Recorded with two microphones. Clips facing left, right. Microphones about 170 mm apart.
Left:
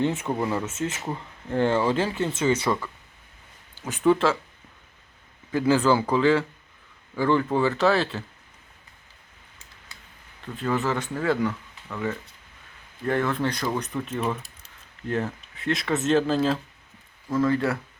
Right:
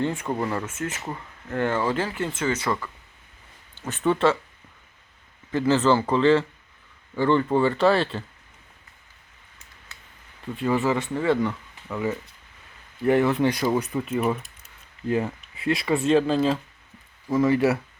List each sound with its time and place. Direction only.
0.0 s speech: 25° left (ahead or behind)
0.3 s speech: 10° left (ahead or behind)
0.7 s speech: 25° left (ahead or behind)
1.0 s speech: 10° left (ahead or behind)
1.5 s speech: 25° left (ahead or behind); by 4.4 s centre (ahead or behind)
5.5 s speech: 10° left (ahead or behind)
10.4 s speech: 5° right (ahead or behind)
14.6 s a sound: 5° right (ahead or behind)
16.0 s speech: centre (ahead or behind)
17.2 s speech: 10° right (ahead or behind)